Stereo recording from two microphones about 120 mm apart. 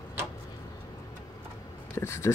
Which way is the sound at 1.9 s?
20° left (ahead or behind).